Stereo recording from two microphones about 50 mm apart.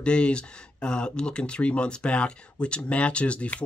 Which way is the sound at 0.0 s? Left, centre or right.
Left.